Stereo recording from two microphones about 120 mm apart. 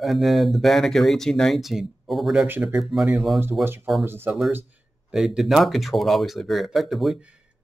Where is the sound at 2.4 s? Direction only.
15° right (ahead or behind).